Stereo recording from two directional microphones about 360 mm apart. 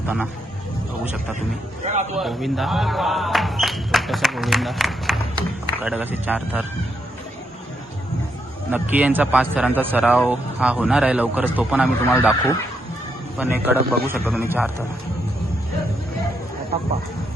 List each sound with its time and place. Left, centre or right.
0.0 s speech: centre
1.8 s a man's voice: centre
2.1 s speech: centre
8.7 s speech: centre
13.3 s speech: centre